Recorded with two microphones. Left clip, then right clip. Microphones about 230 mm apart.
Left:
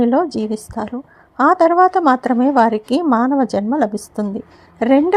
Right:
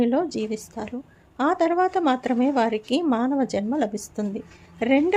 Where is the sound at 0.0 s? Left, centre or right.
Left.